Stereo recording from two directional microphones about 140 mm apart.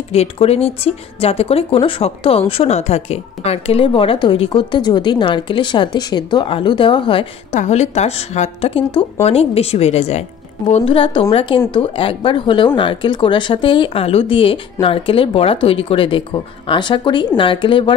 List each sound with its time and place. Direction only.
0.1 s speech: 45° left (ahead or behind)
7.5 s a woman's voice: 55° left (ahead or behind); by 17.9 s 35° left (ahead or behind)